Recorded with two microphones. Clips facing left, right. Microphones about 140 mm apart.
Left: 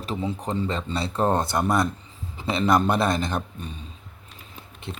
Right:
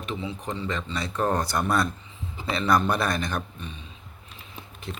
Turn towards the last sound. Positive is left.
turn(degrees=25)  # may be behind; listen again after turning